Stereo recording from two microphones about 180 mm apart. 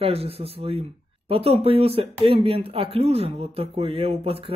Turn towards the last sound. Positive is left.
turn(degrees=-30)  # may be behind; listen again after turning